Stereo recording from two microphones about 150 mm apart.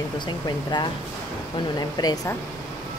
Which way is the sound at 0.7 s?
30° left (ahead or behind).